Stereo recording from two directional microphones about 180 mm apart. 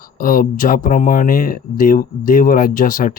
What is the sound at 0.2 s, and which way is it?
Speech, 50° left (ahead or behind).